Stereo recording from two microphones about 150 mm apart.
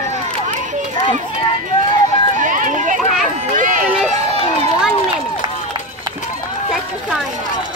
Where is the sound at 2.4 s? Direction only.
60° right (ahead or behind).